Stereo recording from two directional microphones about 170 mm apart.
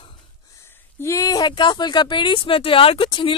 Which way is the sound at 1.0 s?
20° left (ahead or behind).